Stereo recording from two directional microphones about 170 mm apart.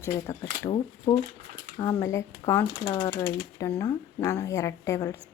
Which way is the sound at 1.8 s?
20° left (ahead or behind).